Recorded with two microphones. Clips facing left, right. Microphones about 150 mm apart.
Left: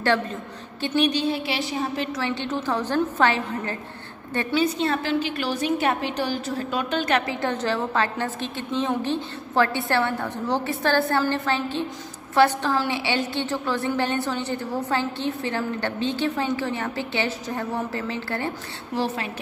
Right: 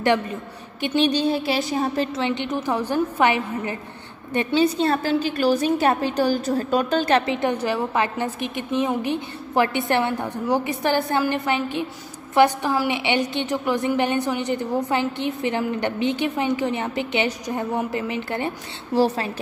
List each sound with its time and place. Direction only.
0.0 s a woman's voice: 15° right (ahead or behind)
0.9 s a woman's voice: 35° right (ahead or behind)
2.1 s a woman's voice: 20° right (ahead or behind)
4.6 s a woman's voice: 35° right (ahead or behind)
7.3 s a woman's voice: 15° right (ahead or behind)